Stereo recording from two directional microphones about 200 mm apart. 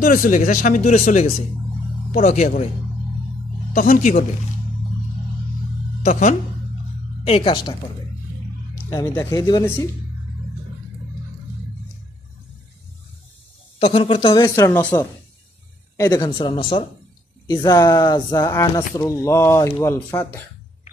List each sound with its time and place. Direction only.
0.0 s speech: 45° left (ahead or behind)
3.7 s speech: 40° left (ahead or behind)
6.0 s speech: 40° left (ahead or behind)
7.2 s speech: 25° left (ahead or behind)
8.9 s speech: 10° left (ahead or behind)
13.7 s speech: 30° left (ahead or behind); by 14.9 s 10° left (ahead or behind)
16.0 s speech: 20° left (ahead or behind)